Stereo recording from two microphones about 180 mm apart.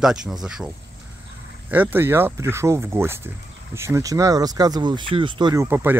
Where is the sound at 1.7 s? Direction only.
10° right (ahead or behind).